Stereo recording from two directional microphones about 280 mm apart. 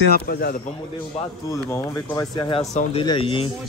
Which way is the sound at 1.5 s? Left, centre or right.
Centre.